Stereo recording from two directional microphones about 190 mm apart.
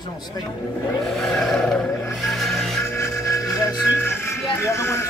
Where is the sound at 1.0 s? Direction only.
Centre (ahead or behind).